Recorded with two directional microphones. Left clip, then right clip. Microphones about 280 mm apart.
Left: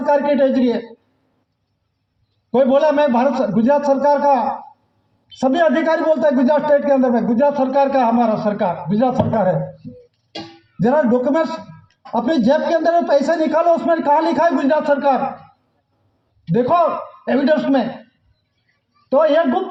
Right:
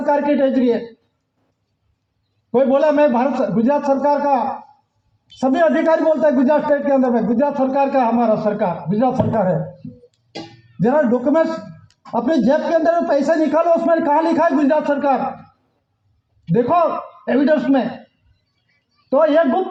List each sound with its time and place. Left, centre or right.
0.0 s speech: left
2.5 s speech: left
10.8 s speech: left
16.5 s speech: left
19.0 s speech: left